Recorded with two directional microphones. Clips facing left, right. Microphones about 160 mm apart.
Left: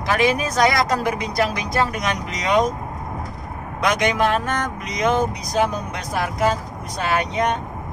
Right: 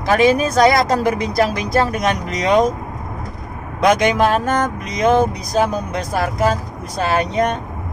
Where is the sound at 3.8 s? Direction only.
30° right (ahead or behind).